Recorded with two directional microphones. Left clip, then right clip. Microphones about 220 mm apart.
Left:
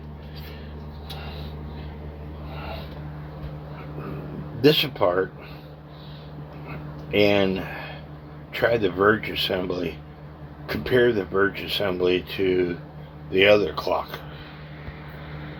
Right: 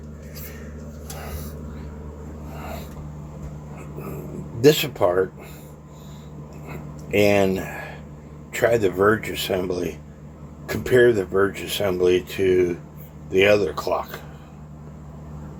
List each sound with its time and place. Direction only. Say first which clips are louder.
4.6 s speech: right 2 dB; 15° right (ahead or behind)
7.1 s speech: right 2 dB; 15° right (ahead or behind)